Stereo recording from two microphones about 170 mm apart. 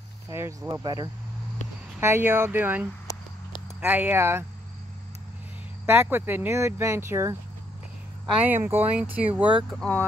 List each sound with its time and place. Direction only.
0.3 s speech: 15° right (ahead or behind)
5.9 s speech: 10° right (ahead or behind)
8.4 s speech: 10° right (ahead or behind)
9.8 s speech: 10° left (ahead or behind)